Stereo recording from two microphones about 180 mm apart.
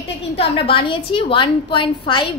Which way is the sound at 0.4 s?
30° left (ahead or behind).